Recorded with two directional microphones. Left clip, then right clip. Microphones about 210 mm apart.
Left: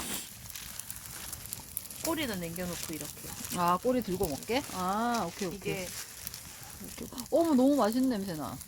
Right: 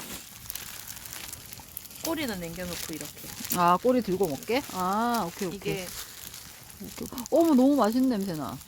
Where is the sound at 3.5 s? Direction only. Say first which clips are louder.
Right 6 dB; 60° right (ahead or behind).